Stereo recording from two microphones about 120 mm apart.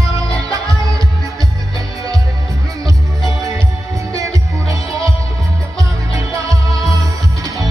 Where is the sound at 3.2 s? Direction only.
30° right (ahead or behind).